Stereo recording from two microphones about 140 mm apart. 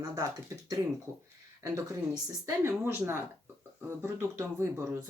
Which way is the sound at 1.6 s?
25° right (ahead or behind).